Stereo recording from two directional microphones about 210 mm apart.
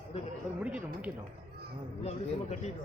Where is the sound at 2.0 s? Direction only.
30° left (ahead or behind).